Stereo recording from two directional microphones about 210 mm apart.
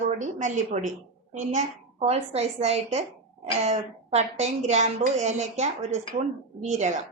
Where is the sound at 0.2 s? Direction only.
35° right (ahead or behind).